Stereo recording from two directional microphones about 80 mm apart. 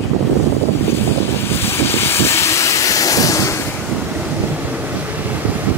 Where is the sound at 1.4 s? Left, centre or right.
Left.